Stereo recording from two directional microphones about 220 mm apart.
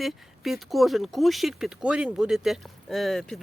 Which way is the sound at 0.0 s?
Centre (ahead or behind).